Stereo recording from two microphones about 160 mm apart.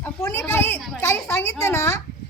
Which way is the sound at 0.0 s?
15° left (ahead or behind).